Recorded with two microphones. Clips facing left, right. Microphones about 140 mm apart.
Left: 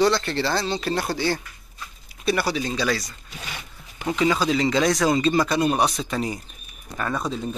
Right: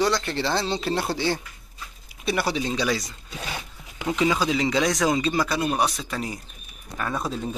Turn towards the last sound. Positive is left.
turn(degrees=-5)  # may be behind; listen again after turning